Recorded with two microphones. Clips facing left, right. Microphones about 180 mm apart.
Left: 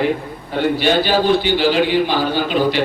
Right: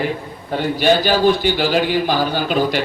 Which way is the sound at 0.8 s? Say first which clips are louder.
Right 4 dB; 45° right (ahead or behind).